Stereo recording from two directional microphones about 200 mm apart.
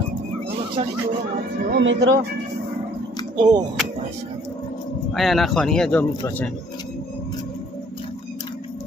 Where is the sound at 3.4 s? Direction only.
20° right (ahead or behind).